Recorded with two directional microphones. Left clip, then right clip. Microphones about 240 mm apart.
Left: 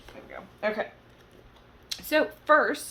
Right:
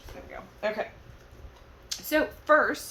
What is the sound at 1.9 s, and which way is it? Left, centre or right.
Speech, centre.